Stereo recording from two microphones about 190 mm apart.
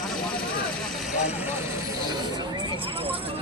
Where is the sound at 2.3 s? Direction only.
25° right (ahead or behind).